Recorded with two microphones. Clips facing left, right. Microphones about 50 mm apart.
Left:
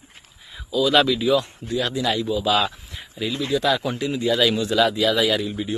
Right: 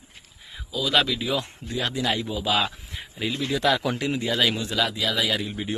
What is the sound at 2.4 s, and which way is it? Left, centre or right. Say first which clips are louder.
Speech: left 3 dB; centre.